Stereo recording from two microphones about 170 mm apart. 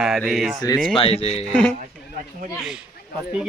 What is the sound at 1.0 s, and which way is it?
Speech, 35° left (ahead or behind).